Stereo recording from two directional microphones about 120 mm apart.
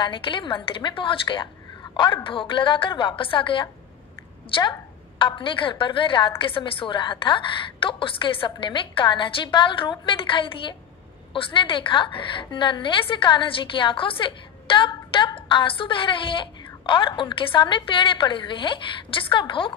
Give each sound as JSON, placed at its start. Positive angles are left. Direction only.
{"t": 0.0, "sound": "a woman's voice", "side_deg": 45}
{"t": 5.2, "sound": "a woman's voice", "side_deg": 45}